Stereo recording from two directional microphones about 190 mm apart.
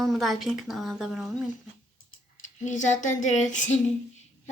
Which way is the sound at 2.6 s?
40° left (ahead or behind).